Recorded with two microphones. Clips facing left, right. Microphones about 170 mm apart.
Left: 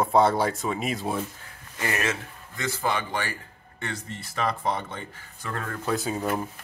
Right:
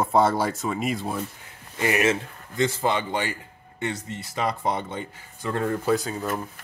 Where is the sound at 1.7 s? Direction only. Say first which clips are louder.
Right 6 dB; 20° right (ahead or behind).